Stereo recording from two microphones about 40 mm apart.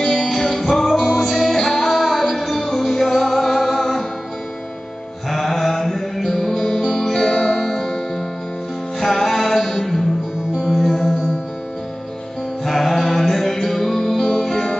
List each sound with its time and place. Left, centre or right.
0.0 s music: centre
5.3 s music: centre
9.0 s music: centre
12.6 s music: centre